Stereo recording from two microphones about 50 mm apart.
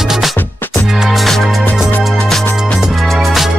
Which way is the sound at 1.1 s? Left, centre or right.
Centre.